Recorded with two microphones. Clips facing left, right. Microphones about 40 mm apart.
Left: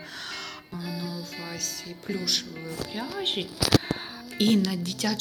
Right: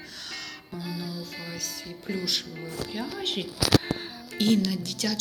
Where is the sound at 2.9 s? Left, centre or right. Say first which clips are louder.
Left 1 dB; centre.